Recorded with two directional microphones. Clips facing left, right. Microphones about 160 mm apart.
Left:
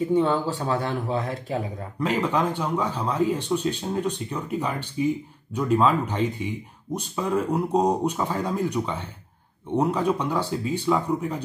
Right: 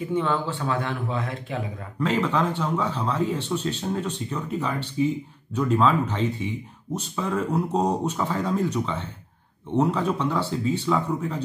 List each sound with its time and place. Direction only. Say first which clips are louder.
0.1 s speech: left 1 dB; 40° left (ahead or behind)
2.0 s speech: even; 15° left (ahead or behind)